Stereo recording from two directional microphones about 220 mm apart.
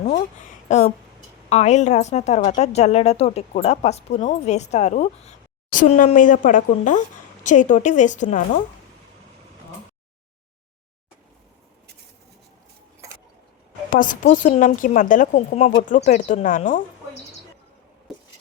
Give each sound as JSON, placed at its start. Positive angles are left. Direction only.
{"t": 0.7, "sound": "a woman's voice", "side_deg": 35}
{"t": 13.9, "sound": "a woman's voice", "side_deg": 35}
{"t": 18.1, "sound": "a sound", "side_deg": 0}